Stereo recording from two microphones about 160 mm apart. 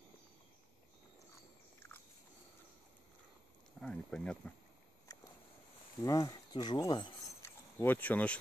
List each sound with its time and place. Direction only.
1.8 s biting: 10° left (ahead or behind)
3.8 s speech: 5° left (ahead or behind)
5.1 s a sound: 20° left (ahead or behind)
6.0 s speech: 25° left (ahead or behind)
7.8 s speech: 10° left (ahead or behind)